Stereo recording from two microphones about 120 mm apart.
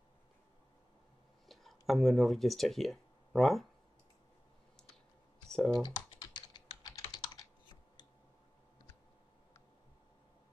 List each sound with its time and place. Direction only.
1.5 s speech: centre (ahead or behind)
5.5 s speech: 5° left (ahead or behind)
5.9 s typing: 40° left (ahead or behind)